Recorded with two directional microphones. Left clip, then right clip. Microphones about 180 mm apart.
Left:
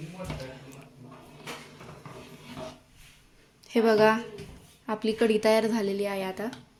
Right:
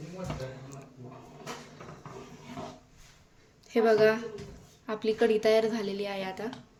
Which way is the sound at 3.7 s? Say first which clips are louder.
Left 2 dB; 40° left (ahead or behind).